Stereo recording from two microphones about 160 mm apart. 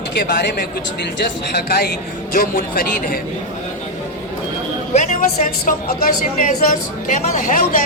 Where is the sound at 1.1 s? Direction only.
80° left.